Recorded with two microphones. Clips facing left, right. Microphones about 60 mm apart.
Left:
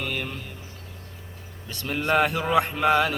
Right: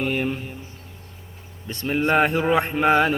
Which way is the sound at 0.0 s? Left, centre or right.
Right.